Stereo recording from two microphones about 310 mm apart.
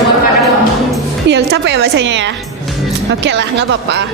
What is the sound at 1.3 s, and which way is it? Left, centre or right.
A woman's voice, right.